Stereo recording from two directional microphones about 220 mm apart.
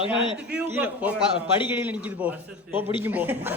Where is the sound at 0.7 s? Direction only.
10° right (ahead or behind).